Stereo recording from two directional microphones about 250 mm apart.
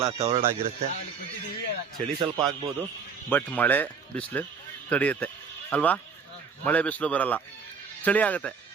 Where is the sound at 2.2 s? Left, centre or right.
Centre.